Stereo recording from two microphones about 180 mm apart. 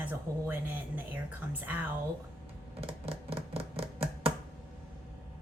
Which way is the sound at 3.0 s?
30° right (ahead or behind).